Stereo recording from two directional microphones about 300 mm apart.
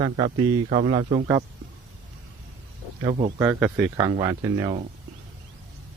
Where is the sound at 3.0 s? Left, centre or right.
Right.